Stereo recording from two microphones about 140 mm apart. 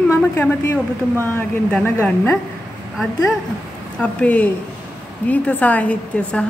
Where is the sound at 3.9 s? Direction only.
10° left (ahead or behind).